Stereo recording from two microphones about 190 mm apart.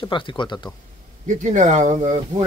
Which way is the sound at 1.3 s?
40° right (ahead or behind).